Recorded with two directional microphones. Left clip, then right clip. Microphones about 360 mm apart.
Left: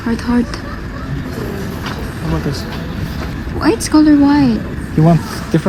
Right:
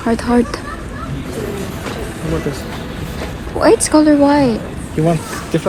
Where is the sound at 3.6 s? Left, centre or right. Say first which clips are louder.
Right 2 dB; centre.